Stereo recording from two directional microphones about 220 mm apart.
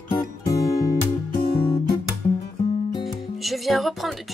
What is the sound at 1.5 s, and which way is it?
Guitar, 25° left (ahead or behind).